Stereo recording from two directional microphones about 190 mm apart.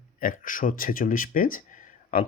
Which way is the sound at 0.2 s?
45° left (ahead or behind).